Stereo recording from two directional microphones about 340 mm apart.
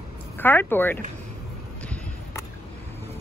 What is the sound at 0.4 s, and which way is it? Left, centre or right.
Speech, centre.